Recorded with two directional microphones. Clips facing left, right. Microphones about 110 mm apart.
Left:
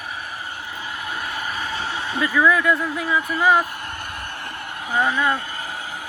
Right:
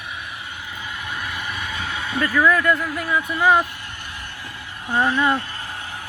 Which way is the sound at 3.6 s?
45° left (ahead or behind).